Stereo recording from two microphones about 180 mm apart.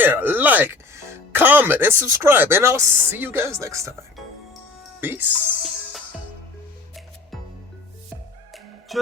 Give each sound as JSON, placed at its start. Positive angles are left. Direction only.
{"t": 0.0, "sound": "speech", "side_deg": -10}
{"t": 4.9, "sound": "music", "side_deg": -10}
{"t": 8.9, "sound": "speech", "side_deg": 0}